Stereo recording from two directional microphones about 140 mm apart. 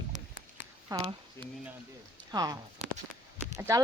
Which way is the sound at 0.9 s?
25° right (ahead or behind).